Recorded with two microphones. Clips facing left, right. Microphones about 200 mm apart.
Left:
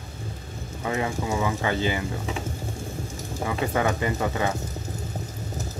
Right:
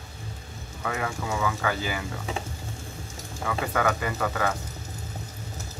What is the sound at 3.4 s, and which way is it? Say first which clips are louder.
Speech: left 2 dB; 25° left (ahead or behind).